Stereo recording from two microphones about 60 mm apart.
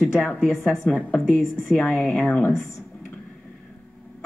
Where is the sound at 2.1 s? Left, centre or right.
Centre.